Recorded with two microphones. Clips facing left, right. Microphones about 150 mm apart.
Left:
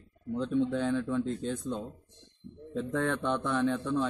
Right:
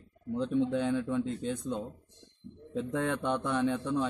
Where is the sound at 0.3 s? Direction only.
15° right (ahead or behind).